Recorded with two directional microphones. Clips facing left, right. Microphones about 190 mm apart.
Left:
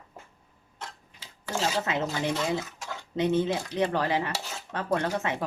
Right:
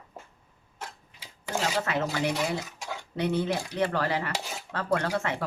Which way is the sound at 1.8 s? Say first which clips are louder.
Right 1 dB; 20° left (ahead or behind).